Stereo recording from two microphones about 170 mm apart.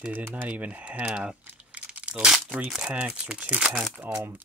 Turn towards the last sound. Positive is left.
turn(degrees=-5)  # may be behind; listen again after turning